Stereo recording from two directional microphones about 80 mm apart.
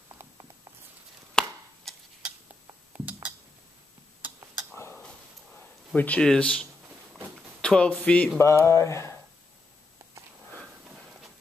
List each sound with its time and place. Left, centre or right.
1.4 s chopping: centre
1.9 s a sound: centre
3.1 s music: centre
5.0 s a sound: centre
5.9 s speech: centre
8.4 s mantra: left